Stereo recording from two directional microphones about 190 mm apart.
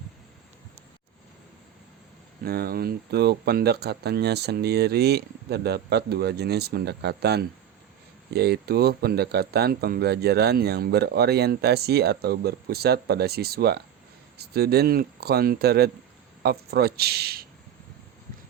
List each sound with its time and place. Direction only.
2.4 s speech: 55° right (ahead or behind)